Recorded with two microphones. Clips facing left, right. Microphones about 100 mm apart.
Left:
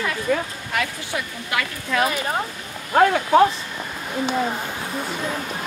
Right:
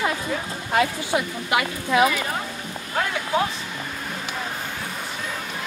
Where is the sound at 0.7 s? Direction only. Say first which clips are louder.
Right 6 dB; 25° right (ahead or behind).